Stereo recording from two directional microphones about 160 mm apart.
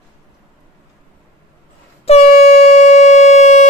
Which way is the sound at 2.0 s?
40° left (ahead or behind).